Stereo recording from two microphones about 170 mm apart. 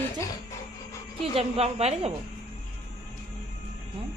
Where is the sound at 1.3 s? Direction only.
35° right (ahead or behind).